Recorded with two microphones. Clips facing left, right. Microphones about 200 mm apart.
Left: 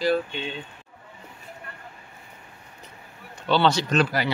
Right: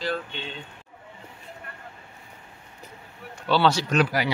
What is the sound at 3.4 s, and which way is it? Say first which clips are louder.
Speech: even; 5° right (ahead or behind).